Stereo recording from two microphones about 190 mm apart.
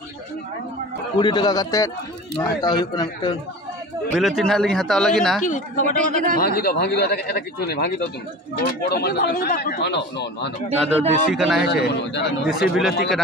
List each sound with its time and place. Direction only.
1.1 s speech: 25° left (ahead or behind)
4.1 s a man's voice: centre (ahead or behind)
5.4 s speech: 40° left (ahead or behind)
5.9 s a man's voice: 40° right (ahead or behind)
6.3 s speech: 55° left (ahead or behind)
11.3 s a man's voice: centre (ahead or behind)
11.6 s speech: 60° left (ahead or behind)
12.4 s a man's voice: 5° right (ahead or behind)